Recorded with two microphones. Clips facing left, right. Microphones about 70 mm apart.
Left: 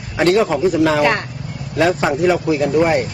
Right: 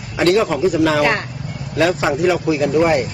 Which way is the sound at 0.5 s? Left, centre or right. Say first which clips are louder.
Left 1 dB; centre.